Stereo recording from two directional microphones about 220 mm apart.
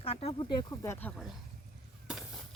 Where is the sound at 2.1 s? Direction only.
Centre (ahead or behind).